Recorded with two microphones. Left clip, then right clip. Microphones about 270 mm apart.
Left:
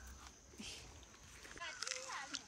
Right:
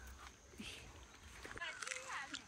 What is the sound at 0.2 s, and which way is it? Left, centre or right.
Dog, centre.